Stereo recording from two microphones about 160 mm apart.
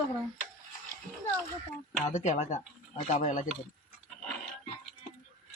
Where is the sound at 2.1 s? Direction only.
45° left (ahead or behind).